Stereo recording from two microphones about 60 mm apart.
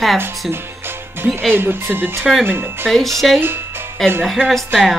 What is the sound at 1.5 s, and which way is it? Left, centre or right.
Speech, right.